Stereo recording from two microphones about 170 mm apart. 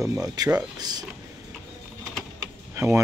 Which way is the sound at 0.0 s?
20° right (ahead or behind).